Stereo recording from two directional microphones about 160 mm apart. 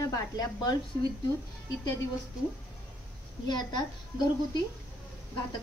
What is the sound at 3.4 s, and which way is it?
Speech, 25° left (ahead or behind).